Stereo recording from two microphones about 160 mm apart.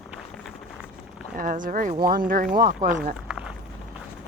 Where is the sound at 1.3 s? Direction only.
60° right (ahead or behind).